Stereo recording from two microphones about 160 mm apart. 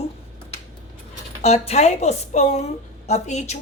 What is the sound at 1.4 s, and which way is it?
Speech, 40° left (ahead or behind).